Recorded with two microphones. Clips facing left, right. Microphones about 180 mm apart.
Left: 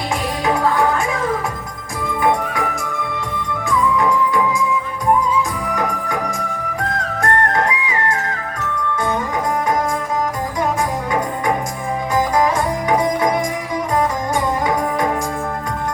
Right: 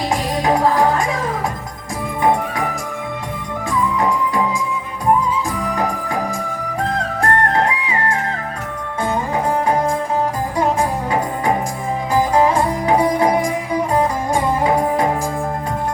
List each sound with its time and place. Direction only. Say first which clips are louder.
0.4 s music: right 2 dB; 35° right (ahead or behind)
5.7 s music: left 1 dB; 30° right (ahead or behind)
7.2 s music: even; 30° right (ahead or behind)
12.1 s music: right 2 dB; 30° right (ahead or behind)